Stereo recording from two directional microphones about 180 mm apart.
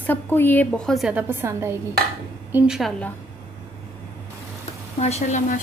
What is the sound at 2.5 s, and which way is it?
Speech, 5° right (ahead or behind).